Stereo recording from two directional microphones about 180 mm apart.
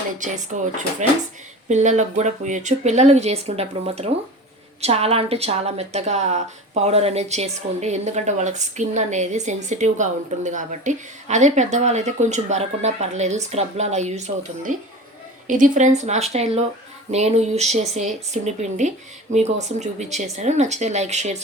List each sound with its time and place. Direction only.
0.2 s a woman's voice: 45° right (ahead or behind)